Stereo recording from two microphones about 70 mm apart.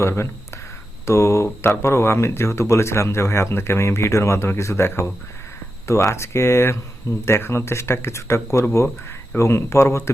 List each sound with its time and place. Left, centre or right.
0.0 s speech: left
9.4 s speech: left